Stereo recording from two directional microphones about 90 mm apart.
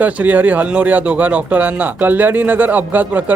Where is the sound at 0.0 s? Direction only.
20° right (ahead or behind).